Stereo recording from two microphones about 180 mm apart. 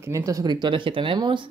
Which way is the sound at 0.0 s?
15° right (ahead or behind).